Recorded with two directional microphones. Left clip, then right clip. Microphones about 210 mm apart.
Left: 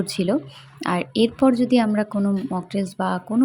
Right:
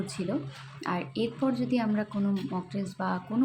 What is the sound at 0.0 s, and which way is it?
A woman's voice, 40° left (ahead or behind).